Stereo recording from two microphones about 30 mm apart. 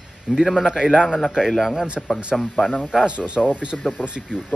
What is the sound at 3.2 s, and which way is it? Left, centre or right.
Speech, left.